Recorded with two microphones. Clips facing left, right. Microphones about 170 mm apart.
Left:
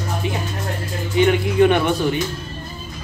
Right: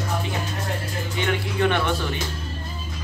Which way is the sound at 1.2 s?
15° left (ahead or behind).